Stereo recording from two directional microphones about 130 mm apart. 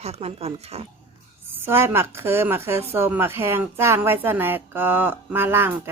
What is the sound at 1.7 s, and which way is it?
Speech, 20° right (ahead or behind).